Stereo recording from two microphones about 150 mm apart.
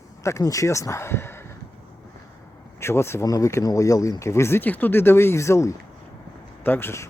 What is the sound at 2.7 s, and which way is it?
Speech, 15° left (ahead or behind).